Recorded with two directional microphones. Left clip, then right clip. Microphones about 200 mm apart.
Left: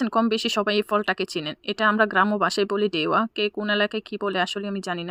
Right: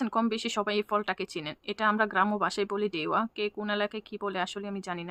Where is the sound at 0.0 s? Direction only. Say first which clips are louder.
Left 7 dB; 30° left (ahead or behind).